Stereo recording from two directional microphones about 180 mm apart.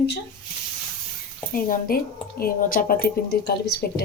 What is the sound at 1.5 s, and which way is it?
A woman's voice, 55° left (ahead or behind).